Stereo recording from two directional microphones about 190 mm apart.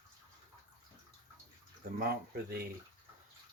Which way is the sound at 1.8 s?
50° right (ahead or behind).